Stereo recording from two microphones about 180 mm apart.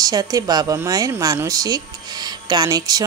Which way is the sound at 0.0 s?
20° right (ahead or behind).